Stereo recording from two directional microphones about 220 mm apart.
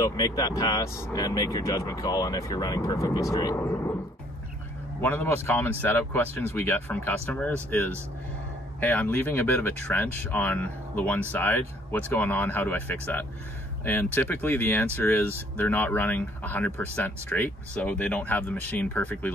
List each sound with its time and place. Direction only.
0.0 s speech: 15° left (ahead or behind)
5.0 s speech: 10° left (ahead or behind)